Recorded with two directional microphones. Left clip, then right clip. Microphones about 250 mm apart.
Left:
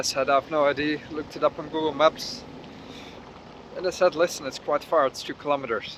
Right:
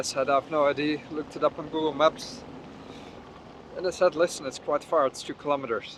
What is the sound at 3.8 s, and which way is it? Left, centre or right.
Speech, centre.